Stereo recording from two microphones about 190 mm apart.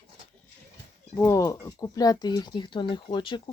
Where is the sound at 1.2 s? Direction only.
15° left (ahead or behind).